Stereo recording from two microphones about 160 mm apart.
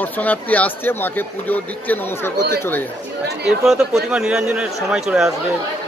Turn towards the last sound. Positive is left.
turn(degrees=-5)  # may be behind; listen again after turning